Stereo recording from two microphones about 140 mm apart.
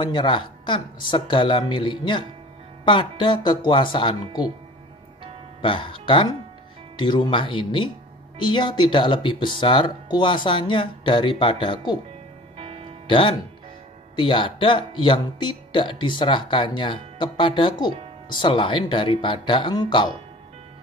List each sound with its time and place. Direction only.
0.0 s speech: 35° left (ahead or behind)
5.6 s speech: 35° left (ahead or behind)
12.5 s music: 45° right (ahead or behind)
13.0 s speech: 35° left (ahead or behind)